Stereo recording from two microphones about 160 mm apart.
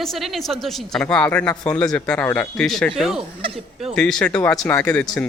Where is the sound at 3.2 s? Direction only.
35° right (ahead or behind).